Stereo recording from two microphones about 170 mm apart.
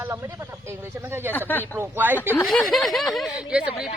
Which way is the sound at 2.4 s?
Centre (ahead or behind).